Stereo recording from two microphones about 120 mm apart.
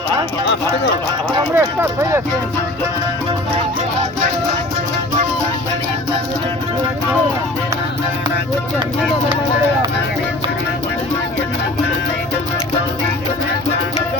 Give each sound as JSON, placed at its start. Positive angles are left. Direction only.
{"t": 1.5, "sound": "speech", "side_deg": -15}